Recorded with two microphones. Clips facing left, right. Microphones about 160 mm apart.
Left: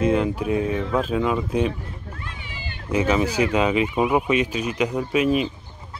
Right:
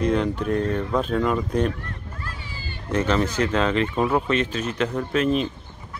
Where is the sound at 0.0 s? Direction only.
5° left (ahead or behind).